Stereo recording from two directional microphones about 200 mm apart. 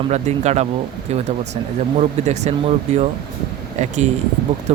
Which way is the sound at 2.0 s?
35° right (ahead or behind).